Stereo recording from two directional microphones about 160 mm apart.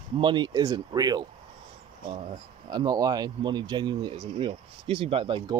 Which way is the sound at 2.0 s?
35° right (ahead or behind).